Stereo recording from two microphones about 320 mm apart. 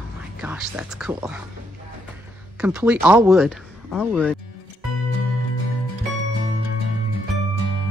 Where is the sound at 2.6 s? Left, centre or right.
Centre.